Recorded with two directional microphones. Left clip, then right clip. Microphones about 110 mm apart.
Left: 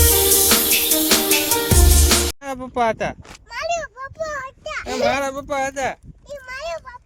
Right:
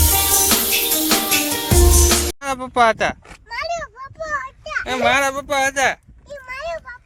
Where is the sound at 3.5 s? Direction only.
50° left (ahead or behind).